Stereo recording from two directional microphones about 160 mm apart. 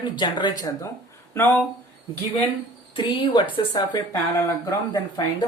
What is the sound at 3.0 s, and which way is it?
Speech, 30° left (ahead or behind).